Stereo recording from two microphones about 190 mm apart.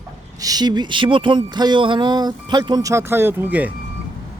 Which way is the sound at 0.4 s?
20° right (ahead or behind).